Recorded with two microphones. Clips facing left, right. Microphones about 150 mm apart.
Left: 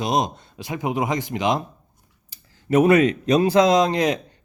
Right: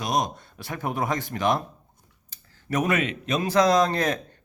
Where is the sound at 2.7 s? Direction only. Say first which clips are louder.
Left 9 dB; 30° left (ahead or behind).